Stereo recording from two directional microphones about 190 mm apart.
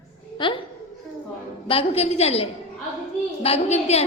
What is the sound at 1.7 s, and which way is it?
A woman's voice, 30° left (ahead or behind).